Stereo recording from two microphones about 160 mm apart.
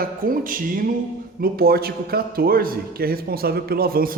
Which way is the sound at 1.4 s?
70° right (ahead or behind).